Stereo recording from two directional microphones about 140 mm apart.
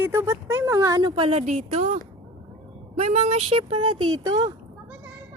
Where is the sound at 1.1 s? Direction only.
45° right (ahead or behind).